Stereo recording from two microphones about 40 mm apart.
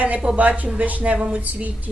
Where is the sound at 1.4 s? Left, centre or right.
Right.